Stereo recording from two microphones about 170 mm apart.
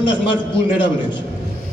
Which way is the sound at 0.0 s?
30° left (ahead or behind).